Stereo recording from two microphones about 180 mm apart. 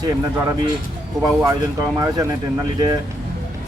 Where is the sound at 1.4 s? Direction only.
20° right (ahead or behind).